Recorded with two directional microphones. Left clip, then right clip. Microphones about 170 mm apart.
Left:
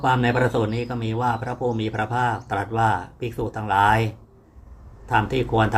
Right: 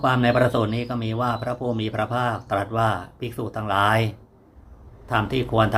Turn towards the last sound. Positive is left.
turn(degrees=-20)  # may be behind; listen again after turning